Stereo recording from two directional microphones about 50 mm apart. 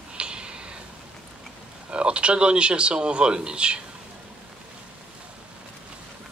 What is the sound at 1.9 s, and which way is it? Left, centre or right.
Speech, right.